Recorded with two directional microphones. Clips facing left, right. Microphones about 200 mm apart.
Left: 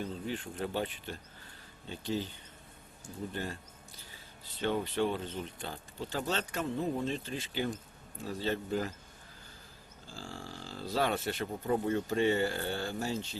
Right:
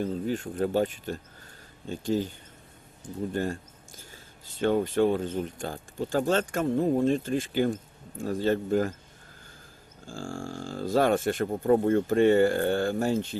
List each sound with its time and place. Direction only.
0.0 s speech: 45° right (ahead or behind)
3.3 s speech: 45° right (ahead or behind)
10.1 s speech: 50° right (ahead or behind)